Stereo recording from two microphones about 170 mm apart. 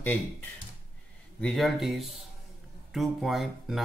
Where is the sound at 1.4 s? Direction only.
Centre (ahead or behind).